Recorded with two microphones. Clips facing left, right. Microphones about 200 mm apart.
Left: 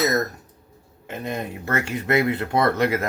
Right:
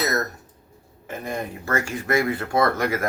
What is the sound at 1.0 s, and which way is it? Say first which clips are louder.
Speech: left 1 dB; 20° left (ahead or behind).